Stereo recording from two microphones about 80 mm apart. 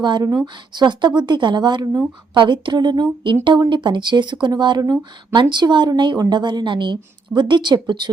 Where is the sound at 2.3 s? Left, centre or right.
Right.